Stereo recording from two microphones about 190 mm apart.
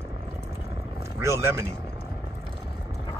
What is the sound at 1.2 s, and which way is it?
Speech, 15° right (ahead or behind).